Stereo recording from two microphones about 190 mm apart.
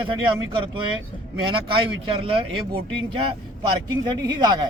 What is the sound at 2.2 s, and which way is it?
A man's voice, 25° right (ahead or behind).